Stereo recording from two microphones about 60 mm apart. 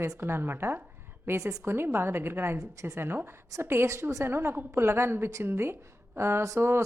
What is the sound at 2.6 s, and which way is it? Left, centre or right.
Speech, right.